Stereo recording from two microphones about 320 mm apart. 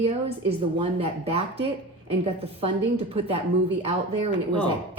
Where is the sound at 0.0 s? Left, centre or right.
Centre.